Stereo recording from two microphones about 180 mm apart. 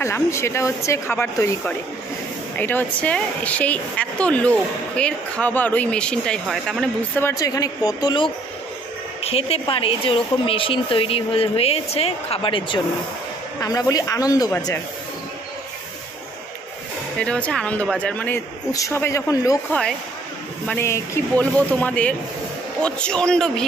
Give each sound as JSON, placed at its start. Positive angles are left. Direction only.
{"t": 0.0, "sound": "a woman's voice", "side_deg": 15}
{"t": 7.2, "sound": "speech", "side_deg": 15}
{"t": 17.2, "sound": "a woman's voice", "side_deg": 5}
{"t": 20.6, "sound": "a woman's voice", "side_deg": 10}